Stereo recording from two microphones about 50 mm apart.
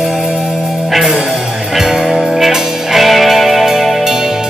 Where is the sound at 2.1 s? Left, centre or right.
Centre.